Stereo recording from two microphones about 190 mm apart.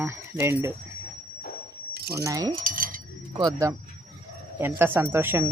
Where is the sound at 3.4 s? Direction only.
20° right (ahead or behind).